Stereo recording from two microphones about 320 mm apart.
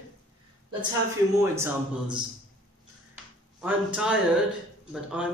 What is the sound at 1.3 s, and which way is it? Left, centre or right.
Speech, centre.